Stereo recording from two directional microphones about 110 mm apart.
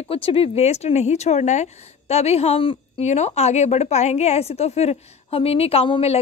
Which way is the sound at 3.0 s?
90° left.